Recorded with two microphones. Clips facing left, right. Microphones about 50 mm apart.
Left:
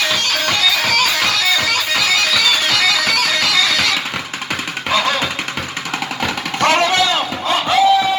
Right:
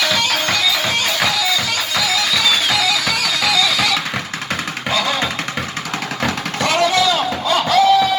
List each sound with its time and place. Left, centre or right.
0.8 s music: left
2.3 s music: left
4.9 s music: left
6.6 s a sound: left
7.5 s music: left